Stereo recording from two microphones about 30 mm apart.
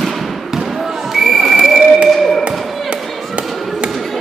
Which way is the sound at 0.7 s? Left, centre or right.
Centre.